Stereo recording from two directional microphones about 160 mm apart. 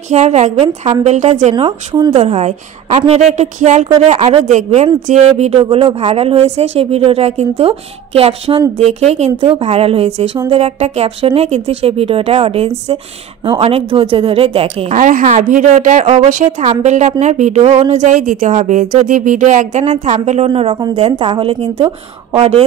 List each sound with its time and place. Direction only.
0.1 s speech: 45° right (ahead or behind)
1.5 s a man's voice: 35° right (ahead or behind)
2.1 s a man's voice: 40° right (ahead or behind)
15.0 s a man's voice: 55° right (ahead or behind); by 22.7 s 35° right (ahead or behind)